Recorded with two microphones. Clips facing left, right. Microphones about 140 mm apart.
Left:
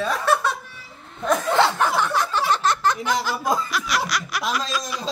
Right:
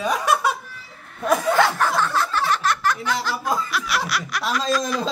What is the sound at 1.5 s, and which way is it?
Chuckle, 25° left (ahead or behind).